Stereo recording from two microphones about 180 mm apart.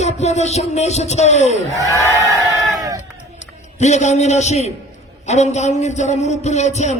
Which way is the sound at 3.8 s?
40° left (ahead or behind).